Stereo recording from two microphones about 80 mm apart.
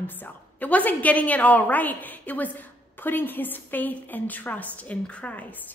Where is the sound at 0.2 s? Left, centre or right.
Left.